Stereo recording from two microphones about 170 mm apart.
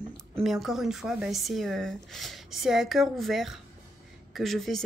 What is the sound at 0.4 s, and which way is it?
Speech, centre (ahead or behind).